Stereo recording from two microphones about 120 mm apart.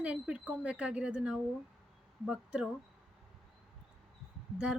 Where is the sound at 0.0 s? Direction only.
10° right (ahead or behind).